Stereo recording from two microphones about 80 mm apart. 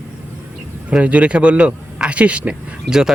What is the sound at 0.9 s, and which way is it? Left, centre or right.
Speech, centre.